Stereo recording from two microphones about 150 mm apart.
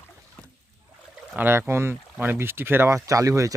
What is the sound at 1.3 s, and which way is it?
Speech, 15° right (ahead or behind).